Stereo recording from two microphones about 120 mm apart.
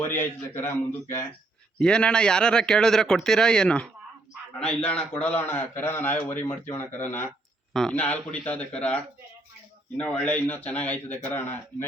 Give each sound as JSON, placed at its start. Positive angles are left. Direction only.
{"t": 0.0, "sound": "a man's voice", "side_deg": 20}
{"t": 1.8, "sound": "a man's voice", "side_deg": 5}
{"t": 7.7, "sound": "a man's voice", "side_deg": 5}